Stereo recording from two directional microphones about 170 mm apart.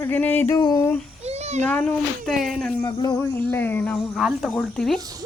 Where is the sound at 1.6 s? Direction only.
10° left (ahead or behind).